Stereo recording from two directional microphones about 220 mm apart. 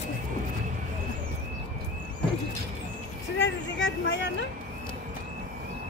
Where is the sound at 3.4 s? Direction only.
60° left (ahead or behind).